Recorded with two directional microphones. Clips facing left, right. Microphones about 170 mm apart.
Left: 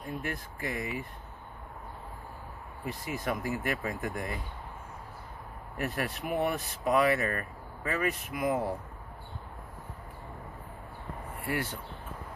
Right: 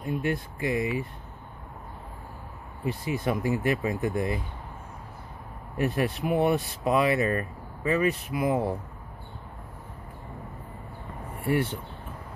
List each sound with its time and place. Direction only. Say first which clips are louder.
0.0 s speech: right 8 dB; 25° right (ahead or behind)
2.8 s speech: right 7 dB; 25° right (ahead or behind)
5.8 s speech: right 7 dB; 25° right (ahead or behind)